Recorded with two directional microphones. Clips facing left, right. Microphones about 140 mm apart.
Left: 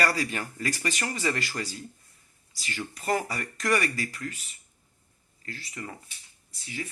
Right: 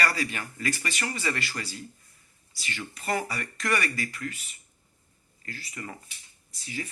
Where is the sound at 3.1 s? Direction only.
45° left (ahead or behind).